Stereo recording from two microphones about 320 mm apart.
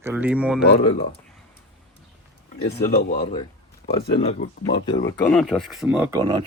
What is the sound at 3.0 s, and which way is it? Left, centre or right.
Speech, left.